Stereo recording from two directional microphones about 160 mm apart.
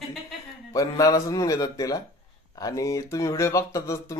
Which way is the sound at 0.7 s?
20° left (ahead or behind).